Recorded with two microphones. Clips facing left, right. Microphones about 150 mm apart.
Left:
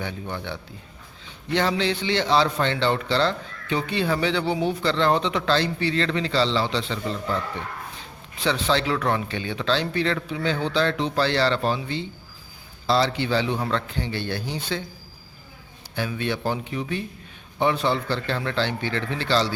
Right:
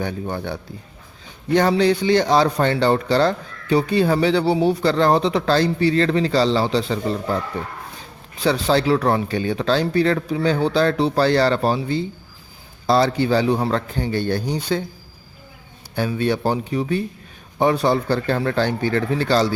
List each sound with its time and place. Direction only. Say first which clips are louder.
0.0 s a man's voice: right 6 dB; 45° right (ahead or behind)
16.0 s a man's voice: right 6 dB; 40° right (ahead or behind)